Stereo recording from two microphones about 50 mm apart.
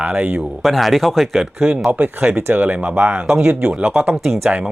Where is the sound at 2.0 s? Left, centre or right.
Right.